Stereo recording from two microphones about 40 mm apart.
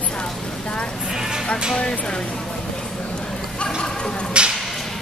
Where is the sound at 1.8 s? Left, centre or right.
Left.